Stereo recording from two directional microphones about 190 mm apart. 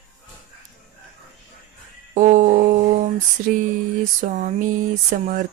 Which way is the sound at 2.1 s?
40° right (ahead or behind).